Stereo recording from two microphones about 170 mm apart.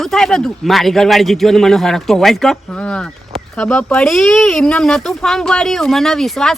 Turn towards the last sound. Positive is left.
turn(degrees=0)  # may be behind; listen again after turning